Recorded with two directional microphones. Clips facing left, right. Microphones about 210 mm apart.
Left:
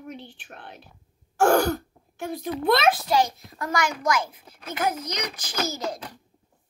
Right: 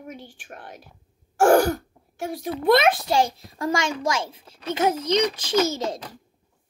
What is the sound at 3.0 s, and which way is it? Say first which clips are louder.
A child's voice: right 1 dB; 30° right (ahead or behind).